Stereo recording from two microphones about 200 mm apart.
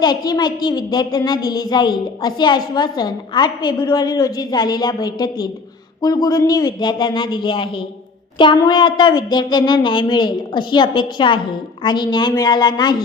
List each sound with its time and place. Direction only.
0.0 s a child's voice: 20° left (ahead or behind)